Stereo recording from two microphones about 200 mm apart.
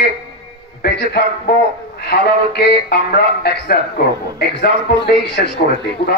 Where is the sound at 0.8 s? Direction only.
50° left (ahead or behind).